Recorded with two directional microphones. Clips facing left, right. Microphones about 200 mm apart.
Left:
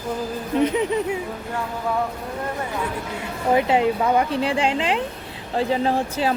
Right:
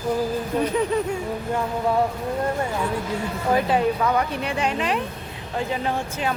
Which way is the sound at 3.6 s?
20° left (ahead or behind).